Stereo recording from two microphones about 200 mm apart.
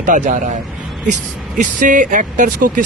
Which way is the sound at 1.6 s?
40° right (ahead or behind).